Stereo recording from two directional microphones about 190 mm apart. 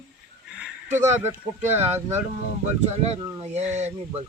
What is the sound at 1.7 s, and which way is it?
Speech, 35° right (ahead or behind).